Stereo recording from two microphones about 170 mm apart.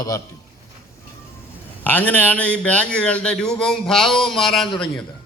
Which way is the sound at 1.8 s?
10° left (ahead or behind).